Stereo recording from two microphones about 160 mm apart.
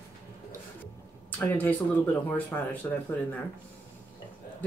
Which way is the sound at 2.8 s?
15° left (ahead or behind).